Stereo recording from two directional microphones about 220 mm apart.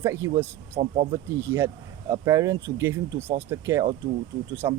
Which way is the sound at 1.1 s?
10° right (ahead or behind).